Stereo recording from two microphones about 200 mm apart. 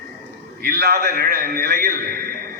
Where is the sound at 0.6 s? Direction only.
55° right (ahead or behind).